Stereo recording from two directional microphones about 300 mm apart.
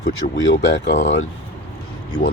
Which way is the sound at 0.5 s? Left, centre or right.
Left.